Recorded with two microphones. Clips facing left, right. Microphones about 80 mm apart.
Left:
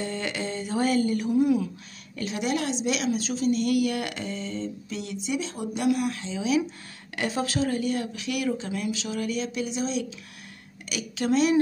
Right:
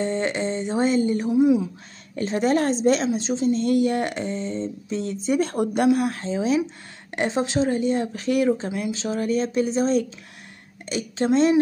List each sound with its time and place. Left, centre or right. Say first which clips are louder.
0.0 s a woman's voice: right 7 dB; right
2.1 s a woman's voice: right 7 dB; right
5.9 s a woman's voice: right 5 dB; right
10.9 s a woman's voice: right 4 dB; right